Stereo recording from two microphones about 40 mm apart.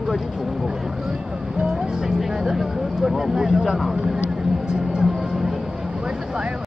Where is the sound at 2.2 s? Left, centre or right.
Centre.